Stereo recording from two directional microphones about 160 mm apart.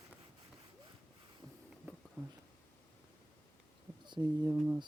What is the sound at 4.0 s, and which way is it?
Speech, 25° right (ahead or behind).